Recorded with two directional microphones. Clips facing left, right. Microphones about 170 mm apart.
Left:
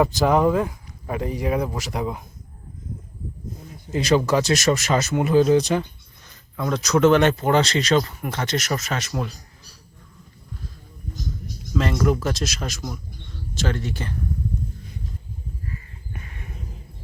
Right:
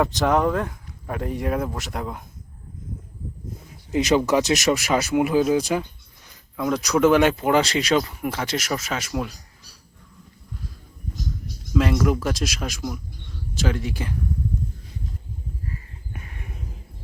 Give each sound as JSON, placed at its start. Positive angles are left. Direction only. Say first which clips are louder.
{"t": 0.0, "sound": "speech", "louder": "left 2 dB", "side_deg": 0}
{"t": 3.9, "sound": "speech", "louder": "even", "side_deg": -15}
{"t": 11.7, "sound": "speech", "louder": "right 1 dB", "side_deg": -5}